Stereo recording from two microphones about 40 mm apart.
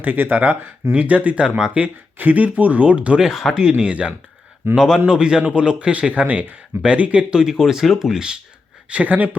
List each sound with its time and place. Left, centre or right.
0.0 s speech: right
0.9 s speech: right
1.4 s a man's voice: centre
2.1 s speech: right
3.2 s speech: centre
3.5 s a man's voice: centre
4.7 s a man's voice: centre
7.3 s speech: centre
8.9 s speech: right